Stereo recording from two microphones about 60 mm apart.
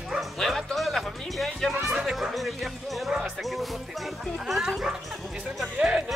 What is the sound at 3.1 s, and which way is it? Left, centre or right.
Speech, centre.